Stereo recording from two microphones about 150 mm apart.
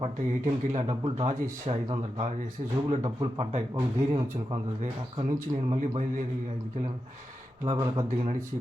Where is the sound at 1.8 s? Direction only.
30° right (ahead or behind).